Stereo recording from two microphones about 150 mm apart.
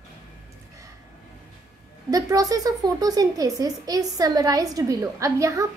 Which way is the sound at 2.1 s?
25° right (ahead or behind).